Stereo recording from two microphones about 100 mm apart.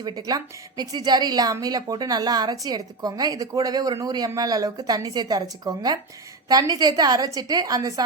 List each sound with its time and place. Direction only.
0.0 s a woman's voice: 45° right (ahead or behind)